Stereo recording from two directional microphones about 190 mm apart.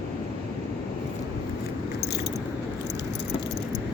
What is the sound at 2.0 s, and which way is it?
Biting, 60° left (ahead or behind).